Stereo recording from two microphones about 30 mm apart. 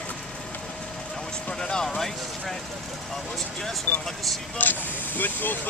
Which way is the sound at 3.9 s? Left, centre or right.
Left.